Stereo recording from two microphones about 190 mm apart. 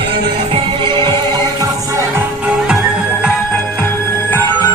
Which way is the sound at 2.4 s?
5° right (ahead or behind).